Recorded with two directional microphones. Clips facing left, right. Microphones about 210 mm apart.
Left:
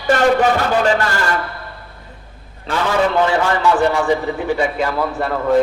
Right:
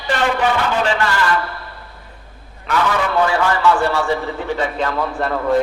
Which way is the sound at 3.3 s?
20° left (ahead or behind).